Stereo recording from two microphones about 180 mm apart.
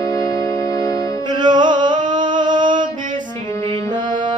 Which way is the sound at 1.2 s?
25° right (ahead or behind).